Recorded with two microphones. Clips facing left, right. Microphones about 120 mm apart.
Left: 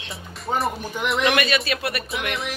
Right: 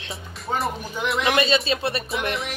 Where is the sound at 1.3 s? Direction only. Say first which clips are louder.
Right 2 dB; 25° right (ahead or behind).